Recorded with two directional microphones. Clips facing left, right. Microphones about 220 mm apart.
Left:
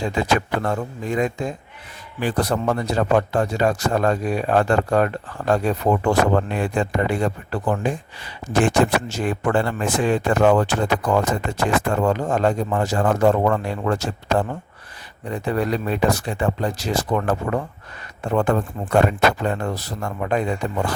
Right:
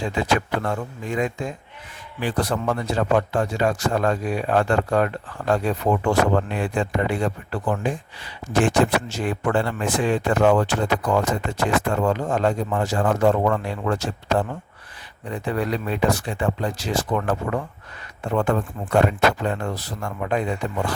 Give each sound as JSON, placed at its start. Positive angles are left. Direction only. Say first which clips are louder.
{"t": 0.0, "sound": "speech", "louder": "left 1 dB", "side_deg": 40}